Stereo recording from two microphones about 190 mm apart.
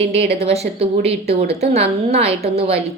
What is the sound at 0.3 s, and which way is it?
Speech, 35° right (ahead or behind).